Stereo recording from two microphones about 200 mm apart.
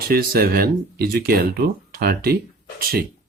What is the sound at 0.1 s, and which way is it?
Speech, 50° right (ahead or behind).